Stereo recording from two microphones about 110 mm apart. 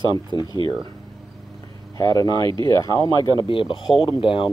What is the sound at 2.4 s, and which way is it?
Speech, 45° right (ahead or behind).